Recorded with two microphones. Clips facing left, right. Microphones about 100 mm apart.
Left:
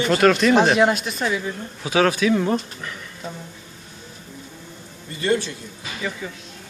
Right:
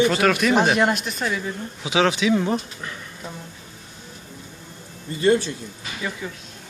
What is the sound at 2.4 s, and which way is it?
Speech, 5° right (ahead or behind).